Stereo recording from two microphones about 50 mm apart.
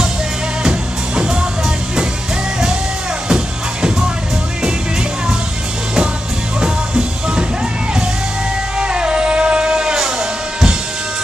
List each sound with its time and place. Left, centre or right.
0.7 s music: centre
3.3 s music: centre
6.6 s music: centre
8.7 s music: centre